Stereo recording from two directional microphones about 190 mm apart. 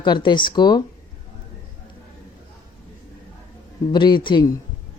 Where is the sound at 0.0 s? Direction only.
25° left (ahead or behind).